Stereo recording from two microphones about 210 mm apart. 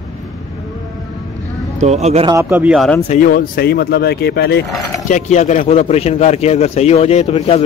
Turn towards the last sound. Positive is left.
turn(degrees=30)  # may be behind; listen again after turning